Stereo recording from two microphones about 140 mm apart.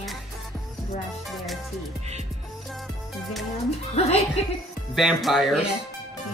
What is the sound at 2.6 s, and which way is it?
Music, centre (ahead or behind).